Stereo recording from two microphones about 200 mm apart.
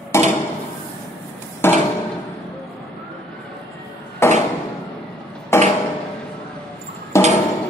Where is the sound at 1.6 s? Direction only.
10° left (ahead or behind).